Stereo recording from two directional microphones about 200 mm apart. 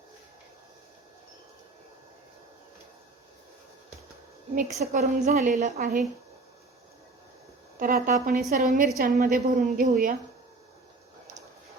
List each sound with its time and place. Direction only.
4.5 s a woman's voice: 35° right (ahead or behind)
7.8 s a woman's voice: 45° right (ahead or behind)